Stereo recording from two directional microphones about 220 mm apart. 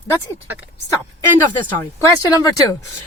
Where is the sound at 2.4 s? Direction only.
15° left (ahead or behind).